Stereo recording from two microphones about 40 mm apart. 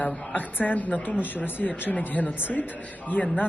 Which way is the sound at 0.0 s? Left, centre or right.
Left.